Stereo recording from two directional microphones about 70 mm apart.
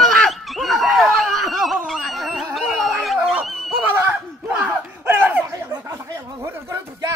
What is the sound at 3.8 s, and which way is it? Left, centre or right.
Snicker, right.